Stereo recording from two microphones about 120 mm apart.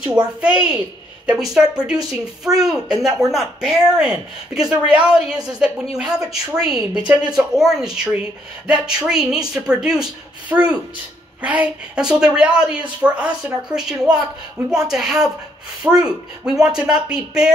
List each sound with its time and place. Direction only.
0.4 s a woman's voice: 10° right (ahead or behind)